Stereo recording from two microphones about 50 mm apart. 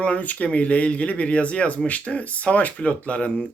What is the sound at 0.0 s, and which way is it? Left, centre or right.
Speech, left.